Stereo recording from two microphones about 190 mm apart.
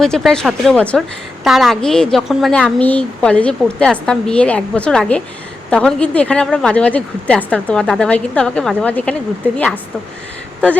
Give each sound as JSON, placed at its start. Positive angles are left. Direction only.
{"t": 0.0, "sound": "a woman's voice", "side_deg": 0}